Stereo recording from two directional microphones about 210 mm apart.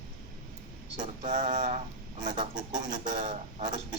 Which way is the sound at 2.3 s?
20° right (ahead or behind).